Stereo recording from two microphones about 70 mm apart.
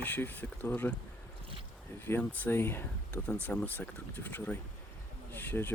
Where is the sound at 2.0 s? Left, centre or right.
Left.